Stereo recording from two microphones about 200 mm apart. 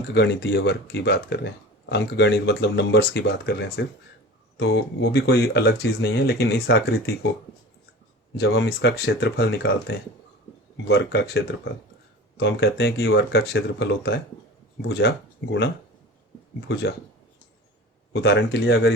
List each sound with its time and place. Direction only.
0.1 s speech: 60° left (ahead or behind)
4.6 s speech: 70° left (ahead or behind)
8.4 s speech: 60° left (ahead or behind)
12.4 s speech: 60° left (ahead or behind)
16.6 s speech: 60° left (ahead or behind)
18.1 s speech: 60° left (ahead or behind)